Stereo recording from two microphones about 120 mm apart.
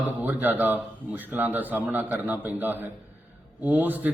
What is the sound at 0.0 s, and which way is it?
A man's voice, 15° right (ahead or behind).